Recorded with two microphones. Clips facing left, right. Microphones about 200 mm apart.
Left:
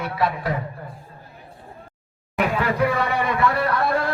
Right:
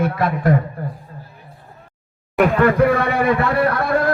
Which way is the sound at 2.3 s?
50° right (ahead or behind).